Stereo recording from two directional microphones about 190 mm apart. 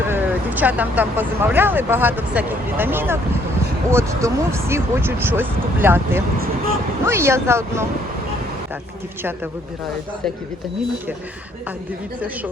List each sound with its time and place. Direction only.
0.1 s speech: 10° right (ahead or behind)